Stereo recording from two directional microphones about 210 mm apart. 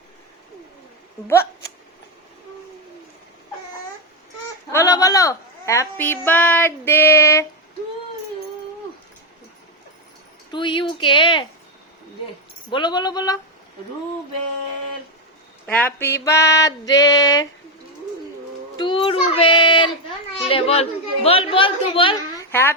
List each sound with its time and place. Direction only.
4.7 s a woman's voice: 15° left (ahead or behind)
10.5 s a woman's voice: 20° left (ahead or behind)
12.7 s a woman's voice: 20° left (ahead or behind)
15.6 s a sound: 5° left (ahead or behind)
18.8 s a woman's voice: 25° left (ahead or behind)